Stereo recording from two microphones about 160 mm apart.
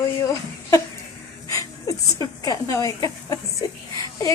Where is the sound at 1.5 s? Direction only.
20° left (ahead or behind).